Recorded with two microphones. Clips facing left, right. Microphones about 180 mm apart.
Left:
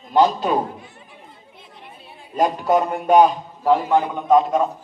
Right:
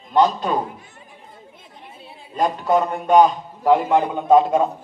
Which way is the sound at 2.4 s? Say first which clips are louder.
Left 1 dB; 10° left (ahead or behind).